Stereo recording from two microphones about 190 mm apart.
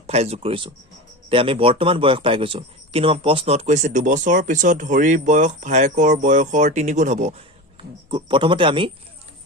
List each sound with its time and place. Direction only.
0.1 s a man's voice: 35° right (ahead or behind)
7.8 s speech: 25° right (ahead or behind)